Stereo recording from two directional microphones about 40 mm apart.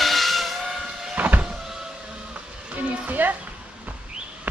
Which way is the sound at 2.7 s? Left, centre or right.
Right.